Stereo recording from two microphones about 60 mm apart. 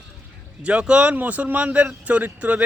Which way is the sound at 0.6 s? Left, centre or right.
Centre.